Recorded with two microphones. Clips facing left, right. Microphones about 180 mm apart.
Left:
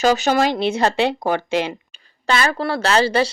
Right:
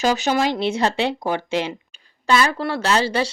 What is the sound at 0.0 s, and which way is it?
Speech, 45° left (ahead or behind).